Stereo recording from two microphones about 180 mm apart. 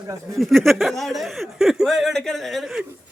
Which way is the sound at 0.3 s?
Centre (ahead or behind).